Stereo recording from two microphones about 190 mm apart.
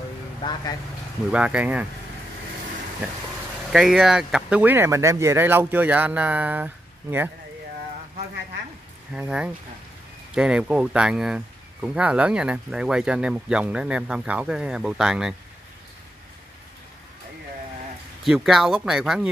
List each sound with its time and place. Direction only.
0.4 s speech: 25° left (ahead or behind)
1.3 s speech: 5° right (ahead or behind)
3.7 s speech: centre (ahead or behind)
9.1 s speech: 5° right (ahead or behind)
18.2 s speech: centre (ahead or behind)